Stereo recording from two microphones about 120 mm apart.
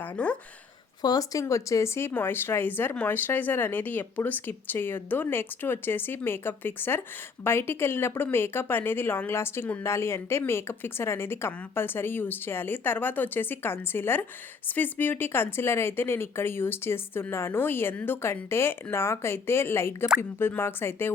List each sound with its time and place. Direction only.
0.0 s speech: 10° left (ahead or behind)
1.0 s a woman's voice: 30° left (ahead or behind)